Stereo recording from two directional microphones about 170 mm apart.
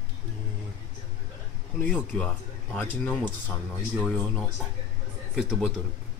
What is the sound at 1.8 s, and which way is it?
Speech, 5° left (ahead or behind).